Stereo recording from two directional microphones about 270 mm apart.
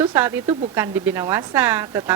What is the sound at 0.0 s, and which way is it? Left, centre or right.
A woman's voice, centre.